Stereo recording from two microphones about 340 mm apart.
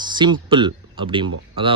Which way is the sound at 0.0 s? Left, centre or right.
Centre.